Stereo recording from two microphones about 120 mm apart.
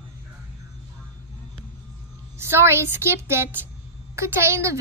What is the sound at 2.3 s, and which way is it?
A woman's voice, 20° right (ahead or behind).